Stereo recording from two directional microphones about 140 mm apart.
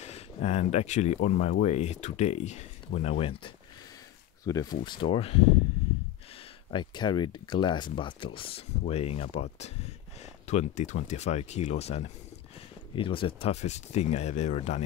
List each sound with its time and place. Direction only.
0.0 s speech: 50° left (ahead or behind)
4.5 s speech: 25° left (ahead or behind)
4.8 s speech: 35° left (ahead or behind)
6.7 s speech: 35° left (ahead or behind); by 12.0 s 50° left (ahead or behind)
12.9 s speech: 40° left (ahead or behind)